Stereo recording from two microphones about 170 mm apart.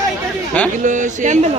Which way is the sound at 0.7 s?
45° right (ahead or behind).